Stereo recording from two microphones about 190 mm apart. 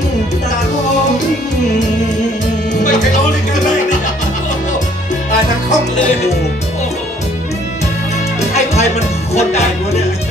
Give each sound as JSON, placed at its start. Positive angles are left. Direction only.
{"t": 2.7, "sound": "music", "side_deg": 40}
{"t": 8.4, "sound": "music", "side_deg": 35}